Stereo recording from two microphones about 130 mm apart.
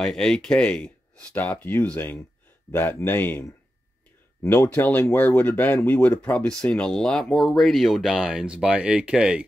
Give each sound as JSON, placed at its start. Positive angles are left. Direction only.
{"t": 0.0, "sound": "speech", "side_deg": 5}